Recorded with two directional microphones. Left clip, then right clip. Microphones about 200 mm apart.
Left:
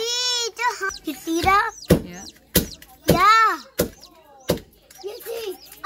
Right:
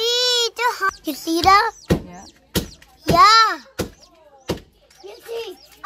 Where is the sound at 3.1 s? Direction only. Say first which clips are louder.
Right 4 dB; 50° right (ahead or behind).